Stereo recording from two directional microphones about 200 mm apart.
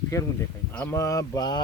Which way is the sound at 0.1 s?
15° left (ahead or behind).